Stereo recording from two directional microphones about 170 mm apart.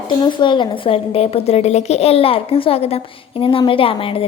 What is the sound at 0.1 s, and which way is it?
A woman's voice, 25° left (ahead or behind).